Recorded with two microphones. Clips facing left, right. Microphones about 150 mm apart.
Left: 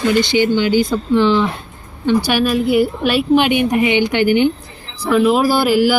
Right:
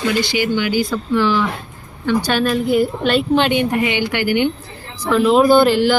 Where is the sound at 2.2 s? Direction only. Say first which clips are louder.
Left 2 dB; 10° left (ahead or behind).